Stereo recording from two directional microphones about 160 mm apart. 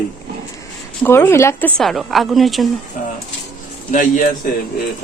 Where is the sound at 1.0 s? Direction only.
15° left (ahead or behind).